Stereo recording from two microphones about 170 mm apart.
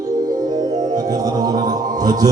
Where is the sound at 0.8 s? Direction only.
50° right (ahead or behind).